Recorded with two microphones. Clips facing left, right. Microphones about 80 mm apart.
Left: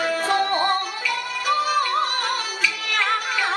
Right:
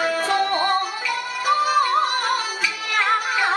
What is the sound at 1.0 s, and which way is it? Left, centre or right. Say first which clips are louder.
Music: even; right.